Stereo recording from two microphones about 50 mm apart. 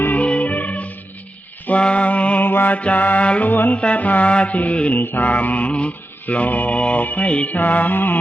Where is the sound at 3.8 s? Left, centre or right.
Left.